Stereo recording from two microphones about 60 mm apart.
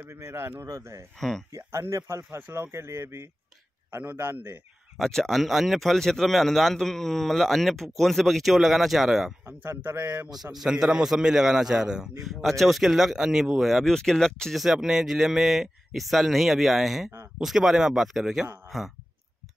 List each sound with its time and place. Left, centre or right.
0.0 s speech: right
0.7 s speech: right
1.6 s speech: right
2.3 s speech: right
3.9 s a man's voice: right
4.9 s speech: centre
9.5 s a man's voice: right
10.5 s a man's voice: centre
12.2 s speech: centre
13.9 s speech: centre
14.6 s a man's voice: centre